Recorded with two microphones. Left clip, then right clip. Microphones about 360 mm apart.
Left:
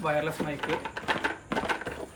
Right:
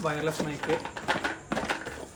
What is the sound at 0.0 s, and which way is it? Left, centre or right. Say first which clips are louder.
Speech: left 1 dB; centre.